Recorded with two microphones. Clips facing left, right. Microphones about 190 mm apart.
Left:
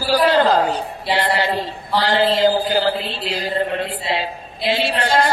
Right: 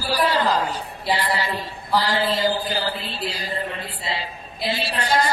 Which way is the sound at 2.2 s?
65° left (ahead or behind).